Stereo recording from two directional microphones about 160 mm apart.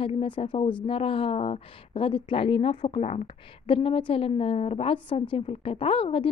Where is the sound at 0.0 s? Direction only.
35° left (ahead or behind).